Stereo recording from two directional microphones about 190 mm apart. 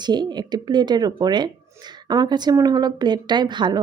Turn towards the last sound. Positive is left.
turn(degrees=-25)  # may be behind; listen again after turning